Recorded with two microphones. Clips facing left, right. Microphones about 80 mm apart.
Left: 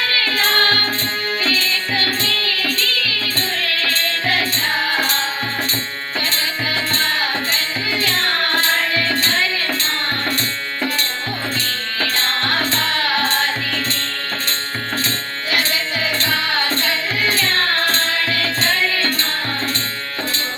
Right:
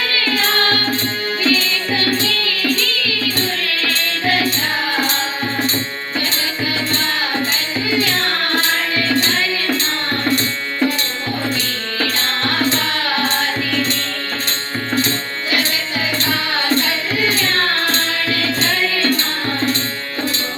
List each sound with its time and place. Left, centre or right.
1.5 s music: centre
3.8 s music: centre
7.9 s music: centre
11.9 s music: centre
16.1 s music: centre